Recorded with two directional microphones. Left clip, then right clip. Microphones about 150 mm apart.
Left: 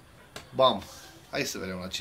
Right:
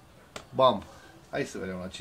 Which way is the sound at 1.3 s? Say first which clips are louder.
Left 1 dB; 25° right (ahead or behind).